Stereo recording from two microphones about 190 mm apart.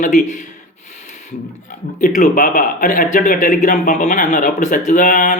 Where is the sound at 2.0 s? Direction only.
45° left (ahead or behind).